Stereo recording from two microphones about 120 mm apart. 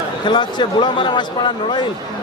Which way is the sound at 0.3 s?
40° left (ahead or behind).